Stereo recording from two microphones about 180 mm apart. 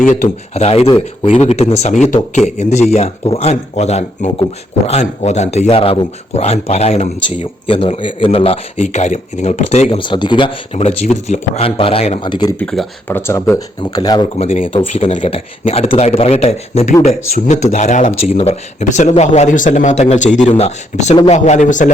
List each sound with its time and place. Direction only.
0.0 s speech: 40° left (ahead or behind); by 12.5 s 25° left (ahead or behind)
12.5 s speech: 5° left (ahead or behind)
13.1 s speech: 15° left (ahead or behind)
14.3 s speech: 35° left (ahead or behind)